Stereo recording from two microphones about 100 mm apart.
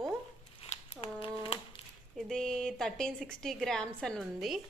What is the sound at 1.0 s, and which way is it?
Speech, 65° left (ahead or behind).